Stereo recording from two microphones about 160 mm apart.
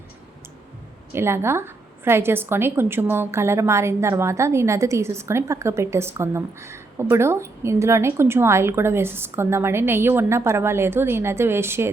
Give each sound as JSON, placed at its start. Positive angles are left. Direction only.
{"t": 1.1, "sound": "a woman's voice", "side_deg": -15}